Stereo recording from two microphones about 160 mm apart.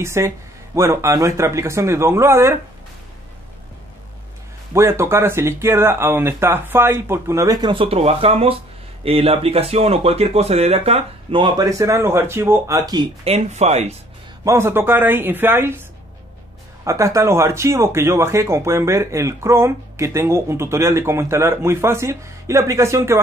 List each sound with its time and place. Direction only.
0.0 s speech: 15° right (ahead or behind)
4.7 s speech: 15° right (ahead or behind)
13.2 s speech: 45° right (ahead or behind)
14.4 s speech: 15° right (ahead or behind)
16.8 s speech: 20° right (ahead or behind)